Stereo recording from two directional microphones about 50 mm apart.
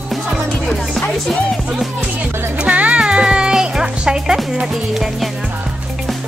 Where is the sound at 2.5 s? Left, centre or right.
Right.